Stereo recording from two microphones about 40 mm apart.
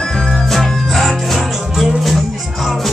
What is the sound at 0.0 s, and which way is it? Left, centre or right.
Music, centre.